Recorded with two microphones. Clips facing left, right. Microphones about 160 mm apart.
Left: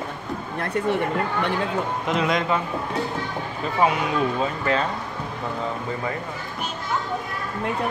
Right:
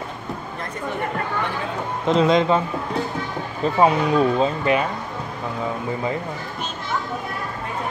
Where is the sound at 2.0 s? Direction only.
30° right (ahead or behind).